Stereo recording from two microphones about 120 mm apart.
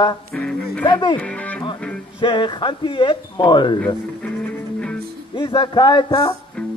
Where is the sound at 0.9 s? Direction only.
40° left (ahead or behind).